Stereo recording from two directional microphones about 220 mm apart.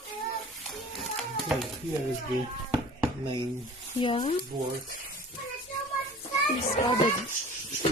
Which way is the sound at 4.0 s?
25° left (ahead or behind).